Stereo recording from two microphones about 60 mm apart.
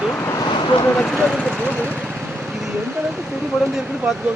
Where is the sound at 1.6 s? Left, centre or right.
Left.